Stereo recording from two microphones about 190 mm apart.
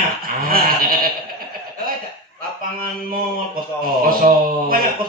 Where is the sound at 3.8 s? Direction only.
50° right (ahead or behind).